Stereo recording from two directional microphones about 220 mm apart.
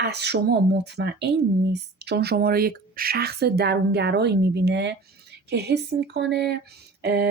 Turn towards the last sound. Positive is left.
turn(degrees=-50)  # may be behind; listen again after turning